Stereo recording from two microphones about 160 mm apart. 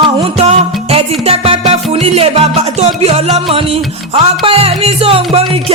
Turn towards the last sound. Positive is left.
turn(degrees=-40)  # may be behind; listen again after turning